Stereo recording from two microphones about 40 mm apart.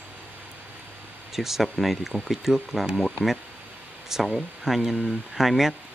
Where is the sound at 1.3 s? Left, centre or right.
Centre.